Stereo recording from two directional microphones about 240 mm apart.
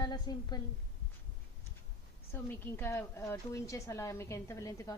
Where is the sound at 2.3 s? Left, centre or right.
Centre.